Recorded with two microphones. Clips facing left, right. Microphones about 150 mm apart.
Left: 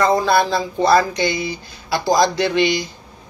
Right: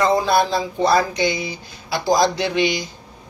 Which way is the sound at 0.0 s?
15° right (ahead or behind).